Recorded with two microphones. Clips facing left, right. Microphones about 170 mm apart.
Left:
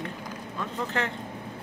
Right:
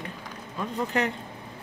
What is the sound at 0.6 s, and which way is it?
Speech, 15° right (ahead or behind).